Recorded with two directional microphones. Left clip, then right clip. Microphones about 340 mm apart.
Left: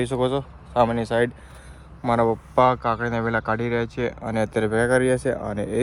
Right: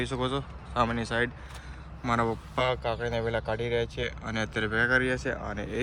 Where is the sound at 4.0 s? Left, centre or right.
Centre.